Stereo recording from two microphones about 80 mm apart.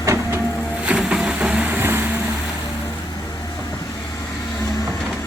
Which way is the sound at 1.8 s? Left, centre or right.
Right.